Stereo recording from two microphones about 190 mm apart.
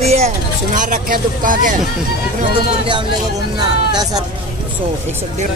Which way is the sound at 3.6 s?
20° right (ahead or behind).